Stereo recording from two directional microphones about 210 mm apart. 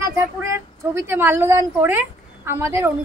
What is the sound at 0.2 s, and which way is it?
A woman's voice, 10° right (ahead or behind).